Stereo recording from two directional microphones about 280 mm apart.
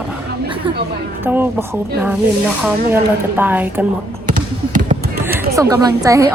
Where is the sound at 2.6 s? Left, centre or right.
Centre.